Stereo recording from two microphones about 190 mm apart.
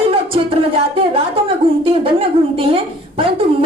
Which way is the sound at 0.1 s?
30° right (ahead or behind).